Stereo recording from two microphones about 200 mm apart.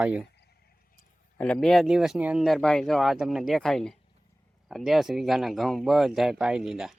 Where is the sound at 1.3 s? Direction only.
5° left (ahead or behind).